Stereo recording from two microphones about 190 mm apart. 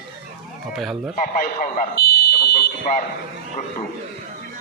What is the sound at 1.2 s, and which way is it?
Speech, 45° left (ahead or behind).